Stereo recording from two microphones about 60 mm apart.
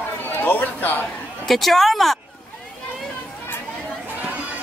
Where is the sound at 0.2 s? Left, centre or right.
Left.